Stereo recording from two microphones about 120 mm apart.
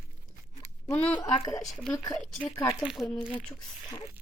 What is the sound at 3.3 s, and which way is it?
Speech, 10° left (ahead or behind).